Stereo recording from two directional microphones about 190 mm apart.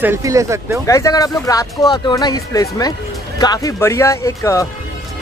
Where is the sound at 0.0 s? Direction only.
15° right (ahead or behind).